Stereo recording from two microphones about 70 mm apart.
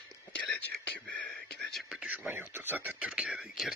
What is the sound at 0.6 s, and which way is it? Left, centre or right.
Whispering, centre.